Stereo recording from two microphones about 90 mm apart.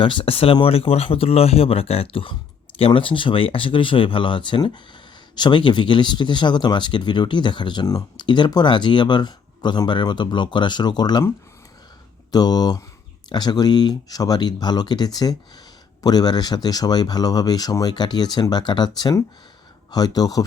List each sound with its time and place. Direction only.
0.0 s speech: 75° left (ahead or behind); by 11.2 s 50° left (ahead or behind)
12.3 s speech: 50° left (ahead or behind)